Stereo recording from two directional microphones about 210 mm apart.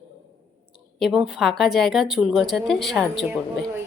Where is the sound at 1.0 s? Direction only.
5° right (ahead or behind).